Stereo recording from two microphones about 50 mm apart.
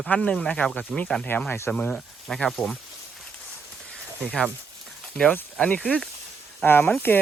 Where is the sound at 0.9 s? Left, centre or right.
Centre.